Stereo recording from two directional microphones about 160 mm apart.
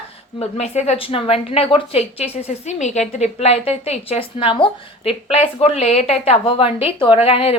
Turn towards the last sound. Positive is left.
turn(degrees=35)  # may be behind; listen again after turning